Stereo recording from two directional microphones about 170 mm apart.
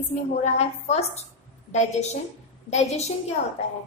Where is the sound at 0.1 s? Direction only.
40° left (ahead or behind).